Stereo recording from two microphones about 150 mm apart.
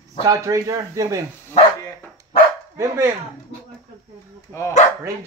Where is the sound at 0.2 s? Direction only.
20° right (ahead or behind).